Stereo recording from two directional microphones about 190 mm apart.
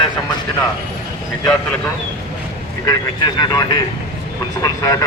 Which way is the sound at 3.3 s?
20° left (ahead or behind).